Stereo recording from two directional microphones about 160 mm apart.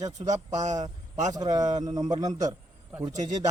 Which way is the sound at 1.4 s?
25° right (ahead or behind).